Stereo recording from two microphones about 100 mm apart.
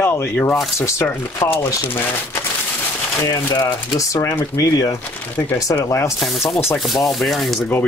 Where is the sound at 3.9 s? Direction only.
35° left (ahead or behind).